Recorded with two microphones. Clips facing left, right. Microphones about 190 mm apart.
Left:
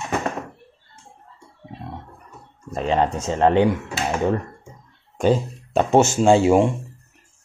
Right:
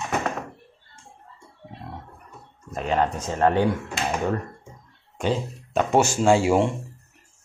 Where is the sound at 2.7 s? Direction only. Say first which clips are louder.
Left 3 dB; 25° left (ahead or behind).